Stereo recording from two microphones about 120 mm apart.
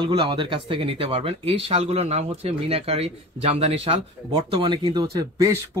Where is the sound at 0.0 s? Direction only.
45° right (ahead or behind).